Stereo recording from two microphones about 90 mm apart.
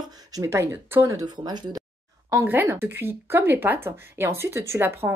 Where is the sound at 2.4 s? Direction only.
25° right (ahead or behind).